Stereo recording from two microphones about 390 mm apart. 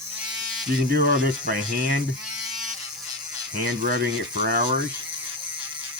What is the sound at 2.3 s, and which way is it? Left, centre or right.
Electric shaver, centre.